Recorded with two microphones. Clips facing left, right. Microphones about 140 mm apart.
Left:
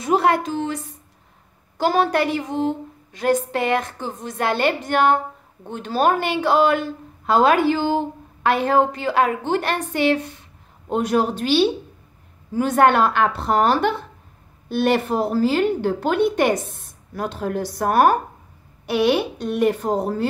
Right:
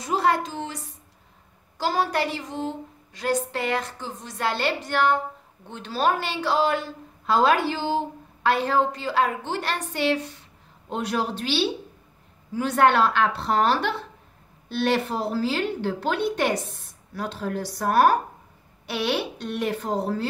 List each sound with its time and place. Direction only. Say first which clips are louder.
0.0 s a woman's voice: left 5 dB; 60° left (ahead or behind)
1.8 s a woman's voice: left 5 dB; 55° left (ahead or behind)